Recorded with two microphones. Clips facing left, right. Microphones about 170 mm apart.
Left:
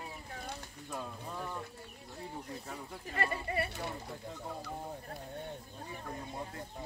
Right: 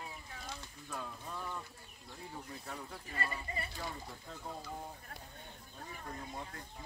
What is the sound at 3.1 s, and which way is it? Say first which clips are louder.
Speech: left 7 dB; 70° left (ahead or behind).